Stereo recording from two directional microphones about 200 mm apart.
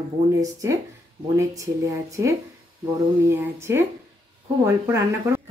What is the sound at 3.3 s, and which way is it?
Speech, 10° right (ahead or behind).